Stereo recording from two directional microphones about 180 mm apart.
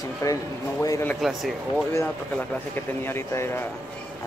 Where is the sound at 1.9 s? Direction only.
10° left (ahead or behind).